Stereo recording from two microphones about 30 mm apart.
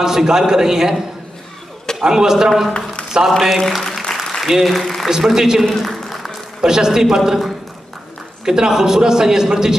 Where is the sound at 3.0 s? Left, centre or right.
Left.